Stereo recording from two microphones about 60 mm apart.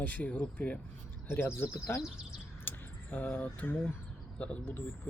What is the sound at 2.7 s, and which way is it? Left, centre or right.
Keys jangling, left.